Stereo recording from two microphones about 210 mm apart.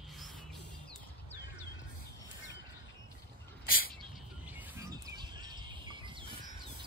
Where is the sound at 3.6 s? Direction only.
45° left (ahead or behind).